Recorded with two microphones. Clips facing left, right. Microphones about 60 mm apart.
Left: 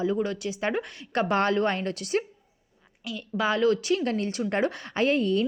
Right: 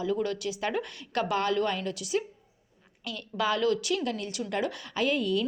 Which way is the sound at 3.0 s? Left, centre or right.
Centre.